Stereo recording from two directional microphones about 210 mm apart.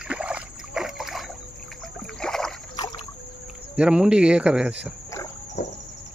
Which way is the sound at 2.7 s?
20° left (ahead or behind).